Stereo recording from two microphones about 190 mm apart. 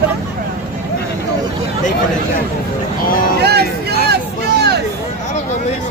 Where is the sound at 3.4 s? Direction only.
60° right (ahead or behind).